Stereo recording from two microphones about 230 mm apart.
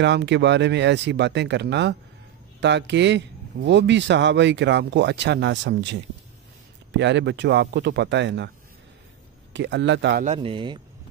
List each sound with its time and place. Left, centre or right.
0.0 s speech: right
9.5 s speech: right
10.2 s speech: right